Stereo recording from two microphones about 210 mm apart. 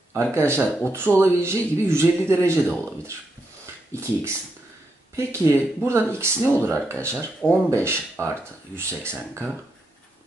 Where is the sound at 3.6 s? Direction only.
15° right (ahead or behind).